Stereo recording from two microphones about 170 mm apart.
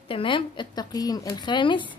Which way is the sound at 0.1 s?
30° left (ahead or behind).